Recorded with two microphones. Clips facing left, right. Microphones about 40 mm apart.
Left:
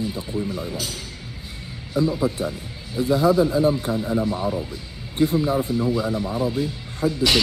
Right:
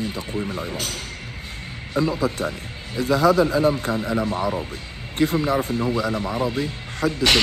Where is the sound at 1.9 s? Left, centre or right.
Right.